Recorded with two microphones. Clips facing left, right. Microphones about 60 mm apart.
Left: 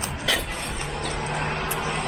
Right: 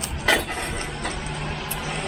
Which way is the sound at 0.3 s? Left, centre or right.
Right.